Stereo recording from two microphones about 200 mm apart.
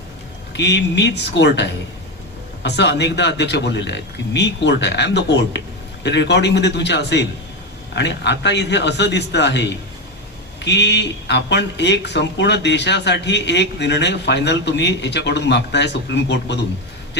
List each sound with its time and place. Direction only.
0.5 s speech: 60° left (ahead or behind)